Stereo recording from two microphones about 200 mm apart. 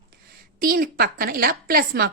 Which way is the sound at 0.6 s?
45° right (ahead or behind).